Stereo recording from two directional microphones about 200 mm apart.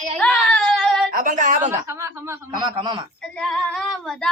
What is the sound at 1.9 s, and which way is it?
Speech, 15° right (ahead or behind).